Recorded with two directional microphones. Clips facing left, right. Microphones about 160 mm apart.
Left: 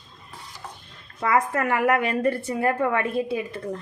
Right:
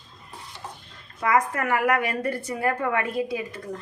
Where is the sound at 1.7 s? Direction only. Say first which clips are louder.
Left 2 dB; 25° left (ahead or behind).